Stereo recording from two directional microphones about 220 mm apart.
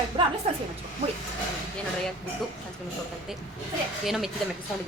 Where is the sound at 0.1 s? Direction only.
25° right (ahead or behind).